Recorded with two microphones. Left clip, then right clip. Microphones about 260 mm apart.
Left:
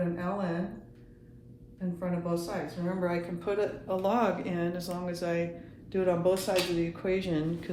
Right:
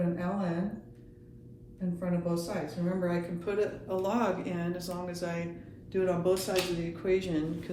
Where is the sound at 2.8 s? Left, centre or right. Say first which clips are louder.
Left 1 dB; left.